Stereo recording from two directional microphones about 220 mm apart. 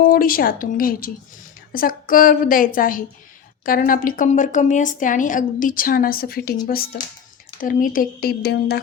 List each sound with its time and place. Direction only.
0.1 s speech: 40° left (ahead or behind)